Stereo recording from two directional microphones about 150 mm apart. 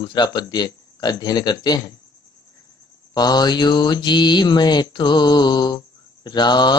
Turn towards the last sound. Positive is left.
turn(degrees=30)  # may be behind; listen again after turning